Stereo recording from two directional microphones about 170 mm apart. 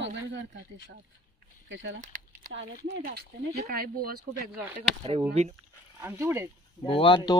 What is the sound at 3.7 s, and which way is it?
Speech, 60° right (ahead or behind).